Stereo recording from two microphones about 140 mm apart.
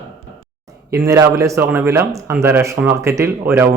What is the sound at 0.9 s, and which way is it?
Speech, 20° right (ahead or behind).